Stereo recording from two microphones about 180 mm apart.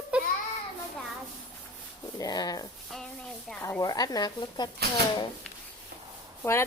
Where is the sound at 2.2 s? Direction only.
20° left (ahead or behind).